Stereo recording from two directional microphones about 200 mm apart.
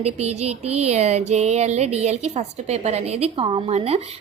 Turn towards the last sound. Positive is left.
turn(degrees=-30)  # may be behind; listen again after turning